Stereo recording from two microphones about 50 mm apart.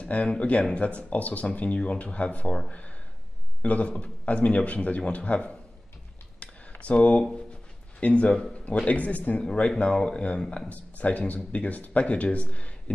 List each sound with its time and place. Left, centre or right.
0.0 s speech: left
3.6 s speech: left
6.4 s a sound: left
8.0 s speech: left
9.4 s speech: centre